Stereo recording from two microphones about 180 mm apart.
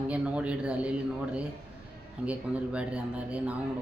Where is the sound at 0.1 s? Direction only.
5° right (ahead or behind).